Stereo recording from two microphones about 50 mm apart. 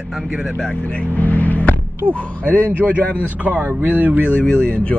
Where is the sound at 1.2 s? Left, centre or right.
Left.